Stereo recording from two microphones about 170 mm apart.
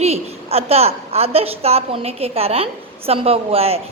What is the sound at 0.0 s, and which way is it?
A woman's voice, 35° right (ahead or behind).